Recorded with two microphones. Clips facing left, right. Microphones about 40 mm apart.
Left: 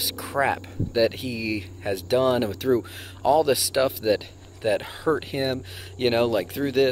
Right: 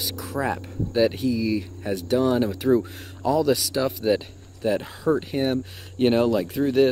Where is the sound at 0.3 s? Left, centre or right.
Left.